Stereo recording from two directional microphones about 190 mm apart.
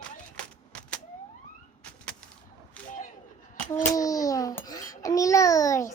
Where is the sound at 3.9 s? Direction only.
15° left (ahead or behind).